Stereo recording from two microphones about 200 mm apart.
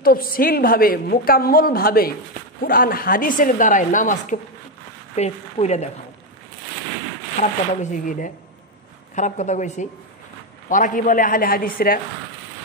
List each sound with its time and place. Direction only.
0.0 s a woman's voice: 45° left (ahead or behind)
7.4 s a woman's voice: 35° left (ahead or behind)